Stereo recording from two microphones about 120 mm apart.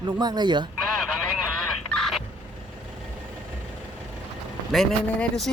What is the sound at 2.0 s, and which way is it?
Fowl, centre (ahead or behind).